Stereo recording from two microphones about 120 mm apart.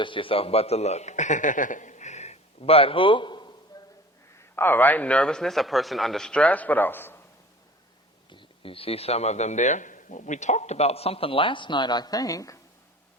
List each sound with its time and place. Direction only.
0.0 s a man's voice: 45° left (ahead or behind)
3.7 s a sound: 35° left (ahead or behind)
4.5 s speech: 15° left (ahead or behind)
8.3 s a man's voice: 45° left (ahead or behind); by 12.5 s 30° left (ahead or behind)